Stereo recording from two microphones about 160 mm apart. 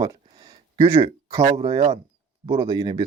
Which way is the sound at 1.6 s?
35° right (ahead or behind).